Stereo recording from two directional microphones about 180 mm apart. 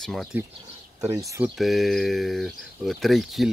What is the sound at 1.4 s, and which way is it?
Speech, centre (ahead or behind).